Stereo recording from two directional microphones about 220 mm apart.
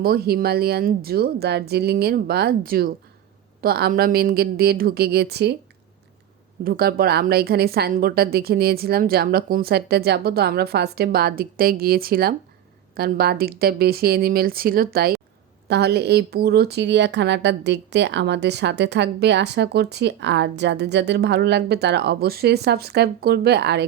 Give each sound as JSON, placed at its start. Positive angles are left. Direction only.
{"t": 0.0, "sound": "speech", "side_deg": -45}
{"t": 6.7, "sound": "speech", "side_deg": -45}